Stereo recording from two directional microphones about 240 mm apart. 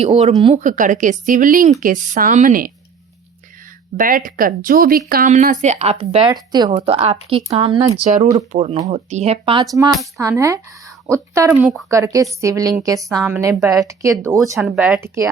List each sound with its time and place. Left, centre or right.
0.0 s a woman's voice: right
3.9 s speech: right
10.2 s a woman's voice: centre
11.6 s speech: centre
11.9 s a woman's voice: centre
13.0 s a woman's voice: centre